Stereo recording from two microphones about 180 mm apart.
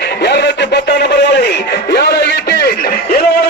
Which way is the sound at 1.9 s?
70° left (ahead or behind).